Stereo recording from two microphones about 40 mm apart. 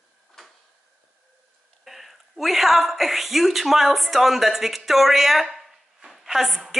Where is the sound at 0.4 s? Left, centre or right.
Centre.